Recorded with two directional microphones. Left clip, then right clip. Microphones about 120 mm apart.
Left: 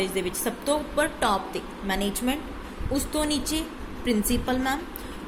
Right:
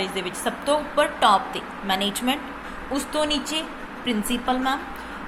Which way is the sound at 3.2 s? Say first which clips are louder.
Right 3 dB; 45° left (ahead or behind).